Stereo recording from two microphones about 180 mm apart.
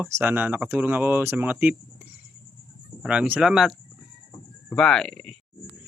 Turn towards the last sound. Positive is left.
turn(degrees=5)  # may be behind; listen again after turning